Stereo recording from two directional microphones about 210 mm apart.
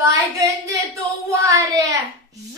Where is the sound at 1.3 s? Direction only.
15° right (ahead or behind).